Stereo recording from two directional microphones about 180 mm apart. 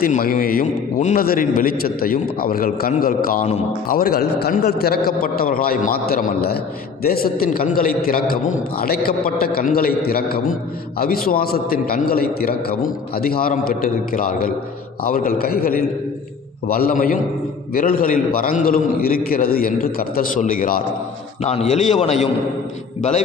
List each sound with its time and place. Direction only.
0.0 s a man's voice: 50° left (ahead or behind)
21.4 s a man's voice: 35° left (ahead or behind)